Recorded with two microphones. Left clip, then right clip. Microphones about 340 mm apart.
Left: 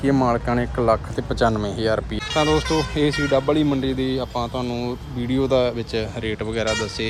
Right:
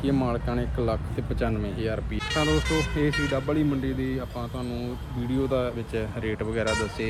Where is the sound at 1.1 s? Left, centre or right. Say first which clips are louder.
Left 9 dB; centre.